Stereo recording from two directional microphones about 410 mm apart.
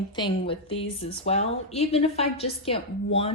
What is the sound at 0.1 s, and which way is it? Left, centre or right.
A woman's voice, centre.